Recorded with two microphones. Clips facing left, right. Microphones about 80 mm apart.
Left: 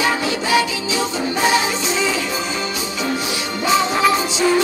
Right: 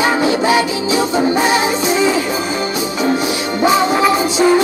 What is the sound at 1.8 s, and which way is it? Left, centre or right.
Music, right.